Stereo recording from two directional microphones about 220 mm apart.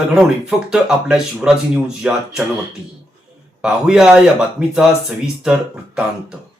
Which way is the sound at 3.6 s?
5° right (ahead or behind).